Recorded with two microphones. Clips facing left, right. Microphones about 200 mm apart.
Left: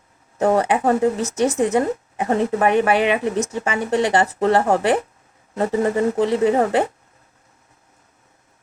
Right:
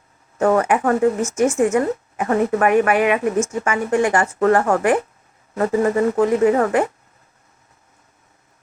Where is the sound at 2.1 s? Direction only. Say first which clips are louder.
Right 2 dB; 25° left (ahead or behind).